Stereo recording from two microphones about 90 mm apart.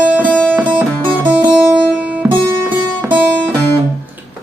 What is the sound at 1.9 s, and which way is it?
Music, 15° right (ahead or behind).